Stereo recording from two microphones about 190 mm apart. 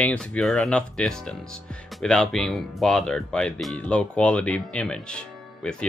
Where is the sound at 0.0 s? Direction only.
5° left (ahead or behind).